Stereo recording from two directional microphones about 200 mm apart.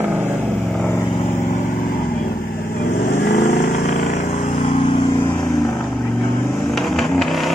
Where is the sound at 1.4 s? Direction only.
40° left (ahead or behind).